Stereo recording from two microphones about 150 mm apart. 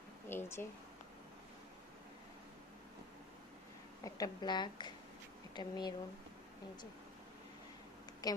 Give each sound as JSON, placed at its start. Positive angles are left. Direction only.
{"t": 0.3, "sound": "speech", "side_deg": 15}
{"t": 4.0, "sound": "a woman's voice", "side_deg": 25}
{"t": 8.2, "sound": "speech", "side_deg": 25}